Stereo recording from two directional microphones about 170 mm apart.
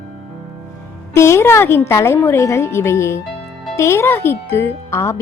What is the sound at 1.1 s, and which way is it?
Speech, 15° left (ahead or behind).